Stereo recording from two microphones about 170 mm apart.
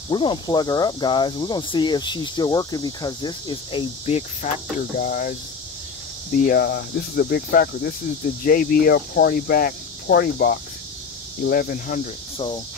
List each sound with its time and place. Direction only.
0.1 s speech: 30° left (ahead or behind)
4.9 s speech: 55° left (ahead or behind)
6.4 s speech: 65° left (ahead or behind)